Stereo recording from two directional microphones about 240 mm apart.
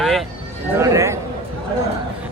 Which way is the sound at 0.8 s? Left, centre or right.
Centre.